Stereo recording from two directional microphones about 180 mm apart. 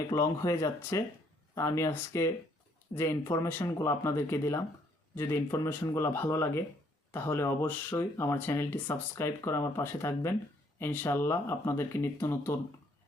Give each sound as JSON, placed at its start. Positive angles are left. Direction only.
{"t": 0.1, "sound": "speech", "side_deg": 15}